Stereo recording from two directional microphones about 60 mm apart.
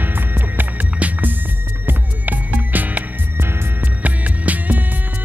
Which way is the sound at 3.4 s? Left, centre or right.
Right.